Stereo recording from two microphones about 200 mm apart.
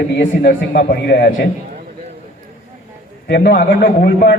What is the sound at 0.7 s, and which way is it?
Speech, 50° left (ahead or behind).